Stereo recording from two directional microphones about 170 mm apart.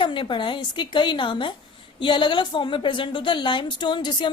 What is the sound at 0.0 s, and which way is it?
A woman's voice, 30° left (ahead or behind).